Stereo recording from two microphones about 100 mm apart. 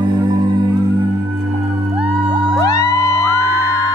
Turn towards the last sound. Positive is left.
turn(degrees=30)  # may be behind; listen again after turning